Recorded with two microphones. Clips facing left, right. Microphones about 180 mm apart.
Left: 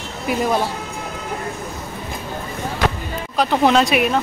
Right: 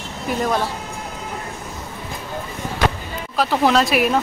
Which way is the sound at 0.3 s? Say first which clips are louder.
Left 2 dB; 10° left (ahead or behind).